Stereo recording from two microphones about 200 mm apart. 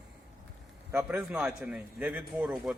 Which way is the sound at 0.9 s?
10° right (ahead or behind).